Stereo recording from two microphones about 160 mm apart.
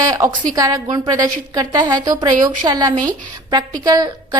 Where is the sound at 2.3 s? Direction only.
55° right (ahead or behind).